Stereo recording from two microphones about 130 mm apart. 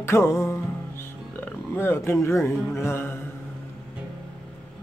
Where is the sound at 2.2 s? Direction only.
20° left (ahead or behind).